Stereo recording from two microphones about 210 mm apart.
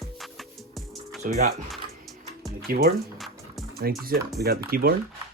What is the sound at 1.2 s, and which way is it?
Speech, 40° right (ahead or behind).